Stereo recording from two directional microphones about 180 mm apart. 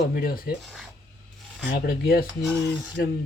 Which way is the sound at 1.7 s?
55° left (ahead or behind).